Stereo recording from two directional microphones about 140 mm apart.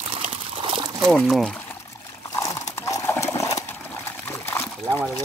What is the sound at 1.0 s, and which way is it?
Speech, centre (ahead or behind).